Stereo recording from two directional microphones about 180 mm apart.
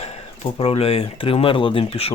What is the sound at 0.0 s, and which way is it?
Speech, 30° left (ahead or behind).